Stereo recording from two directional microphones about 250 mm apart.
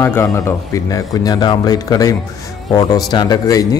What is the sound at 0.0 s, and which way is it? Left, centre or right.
A man's voice, centre.